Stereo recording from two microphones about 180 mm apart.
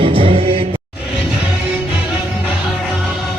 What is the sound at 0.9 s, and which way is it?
Music, 5° right (ahead or behind).